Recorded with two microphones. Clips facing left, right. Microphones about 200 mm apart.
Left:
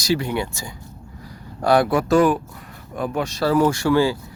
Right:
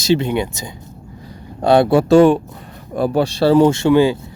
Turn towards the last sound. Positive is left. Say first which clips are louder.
# right 5 dB
turn(degrees=-20)  # may be behind; listen again after turning